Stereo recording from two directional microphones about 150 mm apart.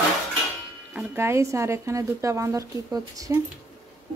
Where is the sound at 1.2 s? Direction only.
20° right (ahead or behind).